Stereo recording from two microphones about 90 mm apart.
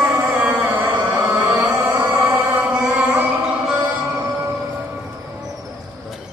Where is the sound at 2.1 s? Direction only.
20° right (ahead or behind).